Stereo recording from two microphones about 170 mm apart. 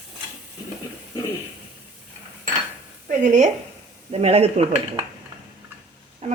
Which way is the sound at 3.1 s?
45° right (ahead or behind).